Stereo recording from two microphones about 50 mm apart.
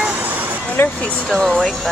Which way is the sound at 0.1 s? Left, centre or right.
Right.